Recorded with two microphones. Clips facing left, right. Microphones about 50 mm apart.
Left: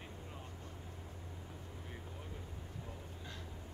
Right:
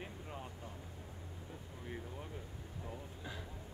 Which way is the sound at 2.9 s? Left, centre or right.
Centre.